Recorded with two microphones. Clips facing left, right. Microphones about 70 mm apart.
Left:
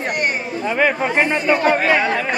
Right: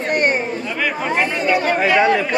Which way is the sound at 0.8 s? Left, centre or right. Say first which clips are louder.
Left 3 dB; left.